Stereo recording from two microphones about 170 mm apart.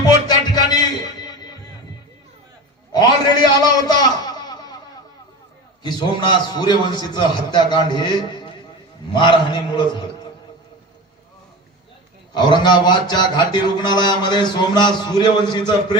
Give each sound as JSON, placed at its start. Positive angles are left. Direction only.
{"t": 0.0, "sound": "music", "side_deg": 25}
{"t": 3.4, "sound": "a sound", "side_deg": 25}
{"t": 5.8, "sound": "a man's voice", "side_deg": 25}
{"t": 12.3, "sound": "a man's voice", "side_deg": 25}